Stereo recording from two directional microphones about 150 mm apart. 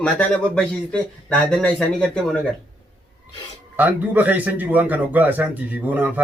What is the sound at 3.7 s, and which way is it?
Speech, 10° right (ahead or behind).